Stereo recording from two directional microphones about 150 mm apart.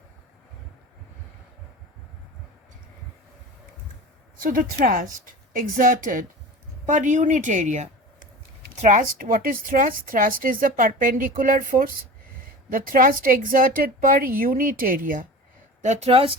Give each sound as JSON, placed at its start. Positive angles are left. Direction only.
{"t": 4.4, "sound": "a woman's voice", "side_deg": -65}
{"t": 15.8, "sound": "speech", "side_deg": -50}